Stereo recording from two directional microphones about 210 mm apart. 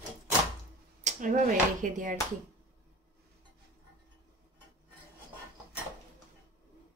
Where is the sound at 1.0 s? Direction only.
35° right (ahead or behind).